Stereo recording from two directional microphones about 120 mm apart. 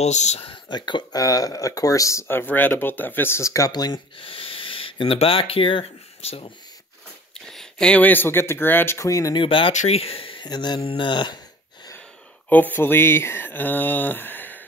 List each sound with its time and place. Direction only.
0.0 s speech: 70° left (ahead or behind)
0.4 s speech: 40° left (ahead or behind)
4.2 s speech: 50° left (ahead or behind)
7.4 s speech: 5° left (ahead or behind); by 9.3 s 25° left (ahead or behind)
9.3 s speech: 45° left (ahead or behind)
9.7 s speech: 65° left (ahead or behind); by 10.8 s 35° left (ahead or behind)
10.8 s speech: 45° left (ahead or behind)
12.4 s speech: 15° left (ahead or behind)